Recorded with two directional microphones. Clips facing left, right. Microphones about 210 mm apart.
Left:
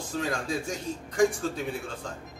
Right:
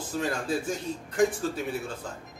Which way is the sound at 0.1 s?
5° right (ahead or behind).